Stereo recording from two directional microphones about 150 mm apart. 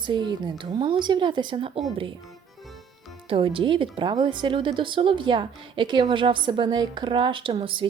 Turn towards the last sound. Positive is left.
turn(degrees=-35)  # may be behind; listen again after turning